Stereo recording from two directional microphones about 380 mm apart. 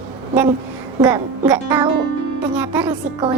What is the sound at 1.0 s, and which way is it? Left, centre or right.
A woman's voice, centre.